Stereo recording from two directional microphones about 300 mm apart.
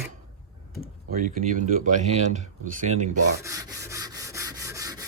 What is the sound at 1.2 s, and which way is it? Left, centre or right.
Speech, right.